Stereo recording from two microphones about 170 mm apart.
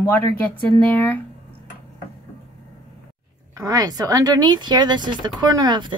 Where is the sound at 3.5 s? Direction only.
20° right (ahead or behind).